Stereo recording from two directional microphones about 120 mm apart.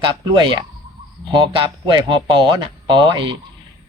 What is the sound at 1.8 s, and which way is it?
Speech, 40° right (ahead or behind).